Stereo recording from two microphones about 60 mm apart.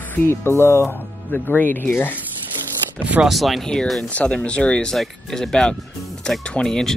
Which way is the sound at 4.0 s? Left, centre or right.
Left.